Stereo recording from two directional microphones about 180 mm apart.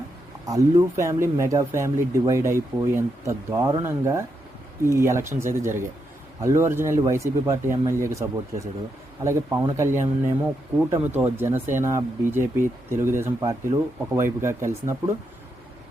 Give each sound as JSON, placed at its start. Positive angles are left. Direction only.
{"t": 0.4, "sound": "speech", "side_deg": -20}